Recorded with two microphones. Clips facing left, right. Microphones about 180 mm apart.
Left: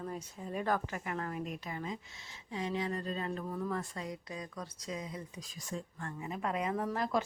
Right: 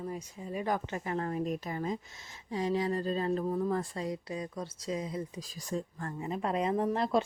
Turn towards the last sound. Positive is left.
turn(degrees=-25)  # may be behind; listen again after turning